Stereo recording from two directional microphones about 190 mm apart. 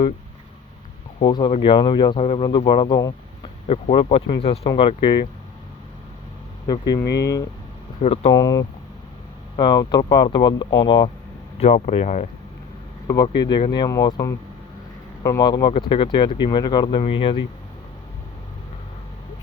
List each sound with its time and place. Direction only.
1.2 s speech: 25° left (ahead or behind)
6.7 s speech: 20° left (ahead or behind)
8.0 s speech: 30° left (ahead or behind)
8.3 s speech: 20° left (ahead or behind)
11.6 s speech: 35° left (ahead or behind)
13.2 s speech: 25° left (ahead or behind)
15.2 s speech: 20° left (ahead or behind)